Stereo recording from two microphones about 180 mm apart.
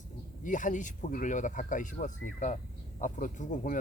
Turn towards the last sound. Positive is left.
turn(degrees=45)  # may be behind; listen again after turning